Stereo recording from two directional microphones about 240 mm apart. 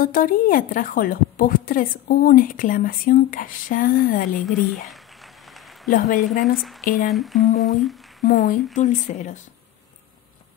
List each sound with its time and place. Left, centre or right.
0.0 s a woman's voice: left
4.4 s speech: centre
5.9 s a woman's voice: left
7.1 s speech: centre
8.2 s a woman's voice: left